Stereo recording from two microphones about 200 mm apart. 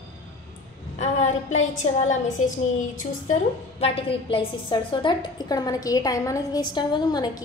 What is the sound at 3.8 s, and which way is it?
A woman's voice, 30° left (ahead or behind).